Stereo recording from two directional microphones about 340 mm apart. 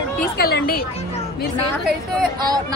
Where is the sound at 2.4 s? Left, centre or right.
Centre.